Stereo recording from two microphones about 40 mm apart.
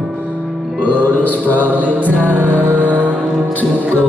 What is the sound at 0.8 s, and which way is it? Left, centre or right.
Music, left.